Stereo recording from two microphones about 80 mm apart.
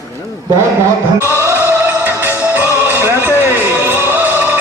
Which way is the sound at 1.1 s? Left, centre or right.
Left.